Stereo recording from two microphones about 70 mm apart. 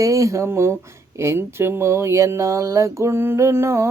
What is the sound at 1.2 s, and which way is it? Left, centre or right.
Speech, right.